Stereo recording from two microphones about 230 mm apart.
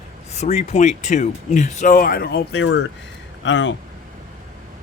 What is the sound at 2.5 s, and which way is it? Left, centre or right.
Speech, left.